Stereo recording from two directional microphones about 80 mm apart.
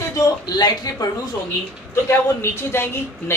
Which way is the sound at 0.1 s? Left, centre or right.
Left.